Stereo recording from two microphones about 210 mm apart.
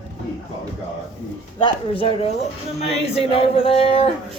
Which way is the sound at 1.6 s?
25° left (ahead or behind).